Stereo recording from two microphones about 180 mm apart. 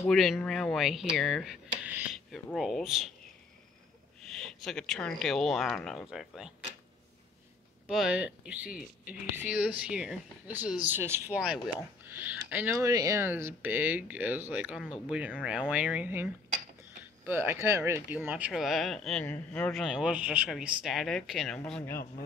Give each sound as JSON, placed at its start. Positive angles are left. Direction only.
{"t": 0.0, "sound": "speech", "side_deg": 0}
{"t": 4.3, "sound": "speech", "side_deg": 0}
{"t": 7.8, "sound": "speech", "side_deg": -5}
{"t": 17.3, "sound": "speech", "side_deg": -10}